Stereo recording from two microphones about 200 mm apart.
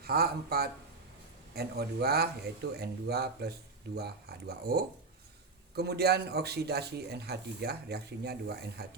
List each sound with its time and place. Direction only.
0.0 s speech: 50° right (ahead or behind)